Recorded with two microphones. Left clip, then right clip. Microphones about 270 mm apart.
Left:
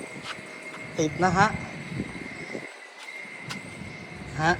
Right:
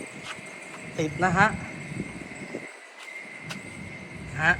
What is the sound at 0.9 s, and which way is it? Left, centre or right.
Speech, centre.